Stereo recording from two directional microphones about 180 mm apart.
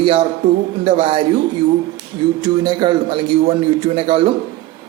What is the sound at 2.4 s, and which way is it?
A man's voice, 25° right (ahead or behind).